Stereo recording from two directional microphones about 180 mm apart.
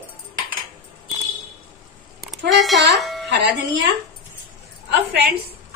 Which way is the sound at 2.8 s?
65° right (ahead or behind).